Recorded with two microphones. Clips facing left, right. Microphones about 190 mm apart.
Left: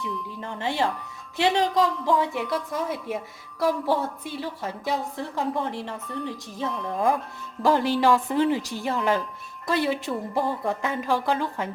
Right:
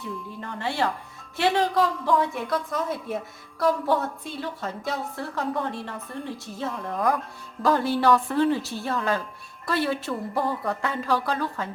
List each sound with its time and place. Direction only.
0.4 s a woman's voice: 15° left (ahead or behind)